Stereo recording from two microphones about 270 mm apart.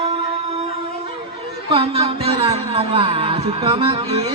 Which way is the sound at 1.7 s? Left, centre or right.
Right.